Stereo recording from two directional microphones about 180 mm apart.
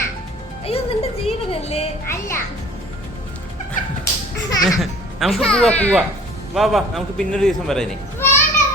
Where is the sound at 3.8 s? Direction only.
45° left (ahead or behind).